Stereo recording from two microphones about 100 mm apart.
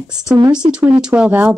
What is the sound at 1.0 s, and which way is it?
Speech, 10° right (ahead or behind).